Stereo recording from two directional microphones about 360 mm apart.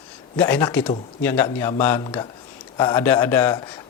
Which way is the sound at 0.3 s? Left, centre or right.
Centre.